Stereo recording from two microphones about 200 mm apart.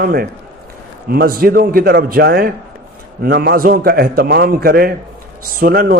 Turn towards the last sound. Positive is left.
turn(degrees=-50)  # may be behind; listen again after turning